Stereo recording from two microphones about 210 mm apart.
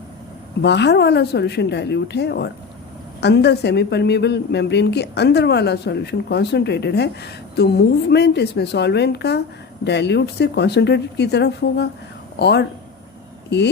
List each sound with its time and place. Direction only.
0.6 s speech: 55° left (ahead or behind)